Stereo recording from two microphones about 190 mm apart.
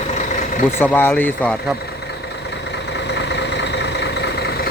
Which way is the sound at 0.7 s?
10° left (ahead or behind).